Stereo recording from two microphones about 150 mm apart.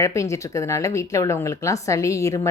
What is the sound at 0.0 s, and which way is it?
Speech, 20° left (ahead or behind).